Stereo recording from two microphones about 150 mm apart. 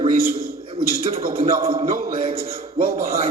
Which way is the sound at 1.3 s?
65° right (ahead or behind).